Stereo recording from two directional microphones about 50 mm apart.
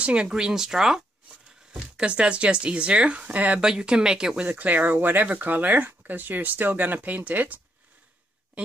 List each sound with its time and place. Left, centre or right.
0.0 s speech: right
0.3 s speech: centre; by 3.6 s right
3.6 s speech: centre
4.5 s speech: right